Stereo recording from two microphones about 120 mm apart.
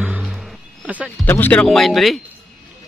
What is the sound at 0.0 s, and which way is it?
Music, 5° right (ahead or behind).